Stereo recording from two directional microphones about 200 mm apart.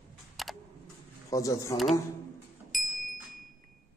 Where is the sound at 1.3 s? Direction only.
15° left (ahead or behind).